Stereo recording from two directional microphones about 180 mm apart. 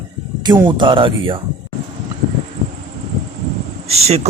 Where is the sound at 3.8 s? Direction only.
35° right (ahead or behind).